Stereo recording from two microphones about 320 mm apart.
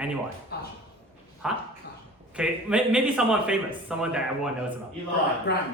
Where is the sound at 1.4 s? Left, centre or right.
Centre.